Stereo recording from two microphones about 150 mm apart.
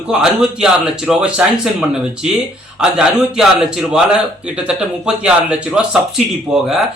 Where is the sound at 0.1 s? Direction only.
5° right (ahead or behind).